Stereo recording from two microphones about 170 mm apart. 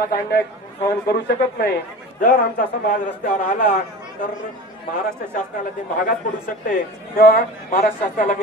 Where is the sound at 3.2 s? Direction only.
50° left (ahead or behind).